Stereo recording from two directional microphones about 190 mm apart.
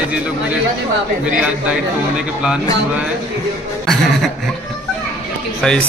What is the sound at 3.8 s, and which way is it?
Chuckle, centre (ahead or behind).